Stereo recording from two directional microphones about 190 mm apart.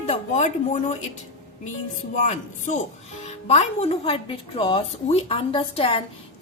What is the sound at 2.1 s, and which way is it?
A woman's voice, 40° left (ahead or behind).